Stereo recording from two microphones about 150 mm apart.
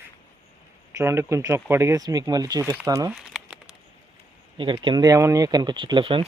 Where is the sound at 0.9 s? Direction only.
15° right (ahead or behind).